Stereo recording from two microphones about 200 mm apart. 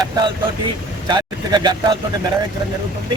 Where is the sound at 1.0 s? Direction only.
20° right (ahead or behind).